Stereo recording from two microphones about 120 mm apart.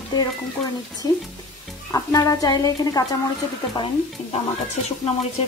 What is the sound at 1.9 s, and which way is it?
Speech, 30° left (ahead or behind).